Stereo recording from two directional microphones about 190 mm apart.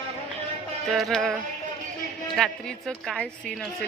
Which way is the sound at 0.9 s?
Centre (ahead or behind).